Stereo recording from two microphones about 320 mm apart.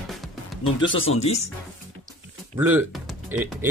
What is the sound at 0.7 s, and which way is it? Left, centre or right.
Speech, left.